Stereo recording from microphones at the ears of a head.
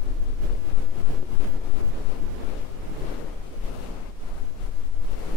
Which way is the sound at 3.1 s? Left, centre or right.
Left.